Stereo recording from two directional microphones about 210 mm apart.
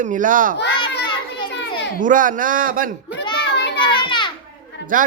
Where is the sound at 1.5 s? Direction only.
55° left (ahead or behind).